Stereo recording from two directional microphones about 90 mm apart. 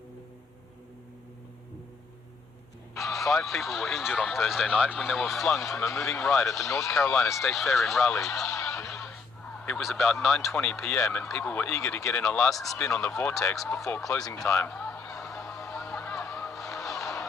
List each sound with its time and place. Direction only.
2.9 s speech: centre (ahead or behind)
10.0 s speech: centre (ahead or behind)
13.0 s speech: 35° left (ahead or behind)
13.5 s speech: 5° left (ahead or behind)
14.6 s a sound: 15° left (ahead or behind)
15.2 s music: 5° left (ahead or behind)